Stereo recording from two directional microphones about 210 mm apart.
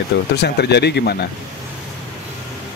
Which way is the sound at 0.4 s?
50° left (ahead or behind).